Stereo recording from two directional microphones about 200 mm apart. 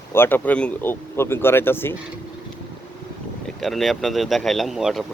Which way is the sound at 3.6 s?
Centre (ahead or behind).